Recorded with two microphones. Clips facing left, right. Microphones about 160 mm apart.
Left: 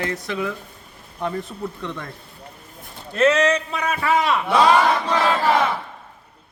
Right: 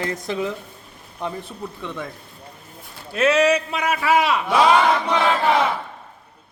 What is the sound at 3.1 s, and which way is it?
A man's voice, 10° right (ahead or behind).